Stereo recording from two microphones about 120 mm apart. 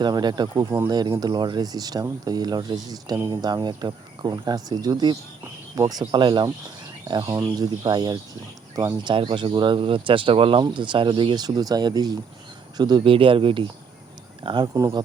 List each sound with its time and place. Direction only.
0.0 s speech: 35° right (ahead or behind)
9.1 s speech: 45° right (ahead or behind)
13.1 s speech: 45° right (ahead or behind)